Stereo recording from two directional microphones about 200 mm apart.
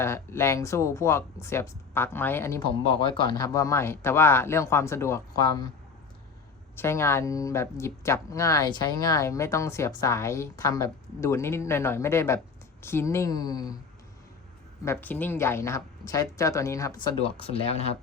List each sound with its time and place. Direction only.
0.0 s speech: 15° left (ahead or behind)
2.6 s speech: 25° left (ahead or behind)
6.7 s speech: 15° left (ahead or behind)
14.8 s speech: 10° left (ahead or behind)
17.4 s speech: 30° left (ahead or behind)